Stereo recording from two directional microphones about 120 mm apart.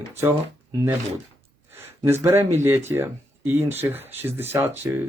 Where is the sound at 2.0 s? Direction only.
20° right (ahead or behind).